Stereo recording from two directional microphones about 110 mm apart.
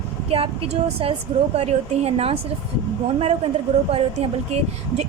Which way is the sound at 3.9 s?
75° right (ahead or behind).